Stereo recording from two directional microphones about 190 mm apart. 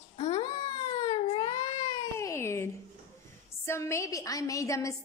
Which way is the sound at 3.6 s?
15° left (ahead or behind).